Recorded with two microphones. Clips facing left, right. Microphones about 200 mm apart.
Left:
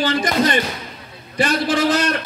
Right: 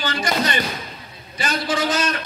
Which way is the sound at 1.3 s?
60° left (ahead or behind).